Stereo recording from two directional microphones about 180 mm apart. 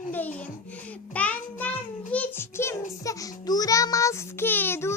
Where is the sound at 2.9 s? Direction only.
20° left (ahead or behind).